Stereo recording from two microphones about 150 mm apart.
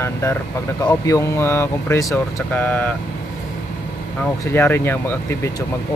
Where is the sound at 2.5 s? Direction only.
10° left (ahead or behind).